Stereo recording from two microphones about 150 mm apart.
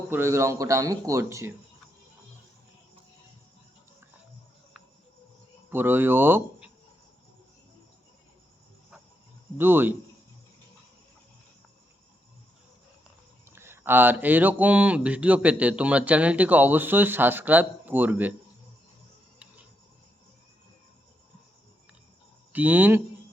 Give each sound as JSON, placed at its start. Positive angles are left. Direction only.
{"t": 0.1, "sound": "speech", "side_deg": -15}
{"t": 5.7, "sound": "speech", "side_deg": -15}
{"t": 9.6, "sound": "speech", "side_deg": -15}
{"t": 13.4, "sound": "speech", "side_deg": -15}
{"t": 22.5, "sound": "speech", "side_deg": -10}